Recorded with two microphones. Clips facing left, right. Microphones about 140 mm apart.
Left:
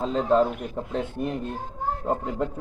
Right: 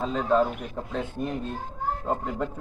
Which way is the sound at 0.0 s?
20° left (ahead or behind).